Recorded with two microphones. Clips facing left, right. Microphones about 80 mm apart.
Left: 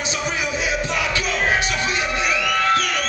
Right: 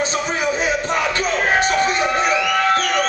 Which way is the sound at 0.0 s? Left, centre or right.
Right.